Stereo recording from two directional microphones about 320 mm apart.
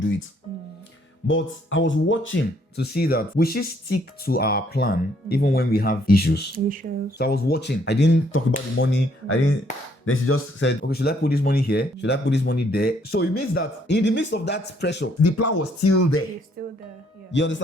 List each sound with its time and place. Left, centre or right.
1.3 s speech: left
6.8 s speech: right
7.2 s speech: left
15.2 s speech: left
16.6 s music: right
17.3 s speech: left